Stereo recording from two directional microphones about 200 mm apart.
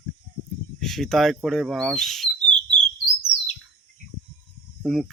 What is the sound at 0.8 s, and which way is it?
Speech, centre (ahead or behind).